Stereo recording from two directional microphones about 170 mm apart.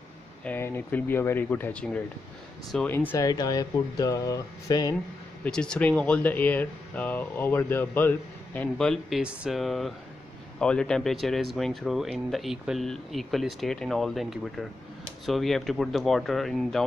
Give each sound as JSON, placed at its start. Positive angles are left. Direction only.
{"t": 0.5, "sound": "speech", "side_deg": 10}
{"t": 3.3, "sound": "speech", "side_deg": 25}
{"t": 5.4, "sound": "speech", "side_deg": 5}